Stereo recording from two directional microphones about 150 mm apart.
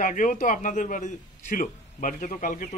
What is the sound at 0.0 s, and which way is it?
A man's voice, 60° left (ahead or behind).